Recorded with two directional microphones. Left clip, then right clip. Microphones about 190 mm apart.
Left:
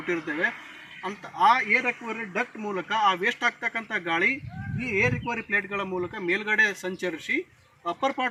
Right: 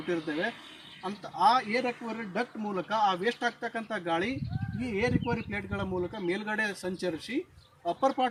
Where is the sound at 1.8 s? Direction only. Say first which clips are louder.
Left 5 dB; 25° right (ahead or behind).